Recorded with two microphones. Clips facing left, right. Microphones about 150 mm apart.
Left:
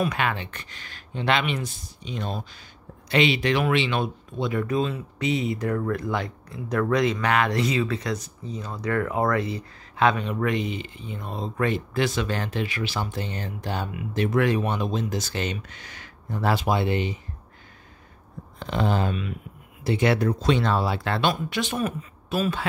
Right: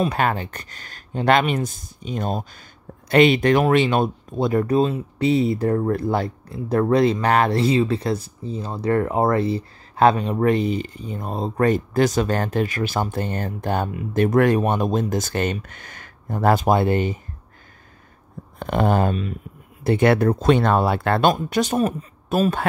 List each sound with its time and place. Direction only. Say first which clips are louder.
0.0 s speech: right 4 dB; 40° right (ahead or behind)
18.6 s speech: right 5 dB; 50° right (ahead or behind)
19.8 s speech: right 5 dB; 55° right (ahead or behind)